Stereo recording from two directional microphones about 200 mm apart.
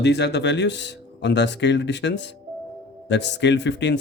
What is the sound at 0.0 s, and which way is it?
Speech, 60° left (ahead or behind).